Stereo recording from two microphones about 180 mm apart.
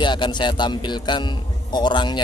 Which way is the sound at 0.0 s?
25° left (ahead or behind).